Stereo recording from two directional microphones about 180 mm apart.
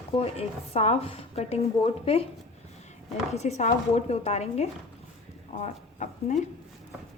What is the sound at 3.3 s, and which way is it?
A woman's voice, 35° left (ahead or behind).